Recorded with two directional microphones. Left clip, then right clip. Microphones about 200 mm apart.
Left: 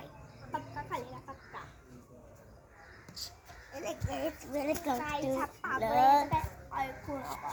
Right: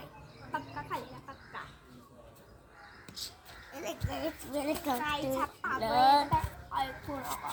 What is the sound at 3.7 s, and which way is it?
A child's voice, 15° right (ahead or behind).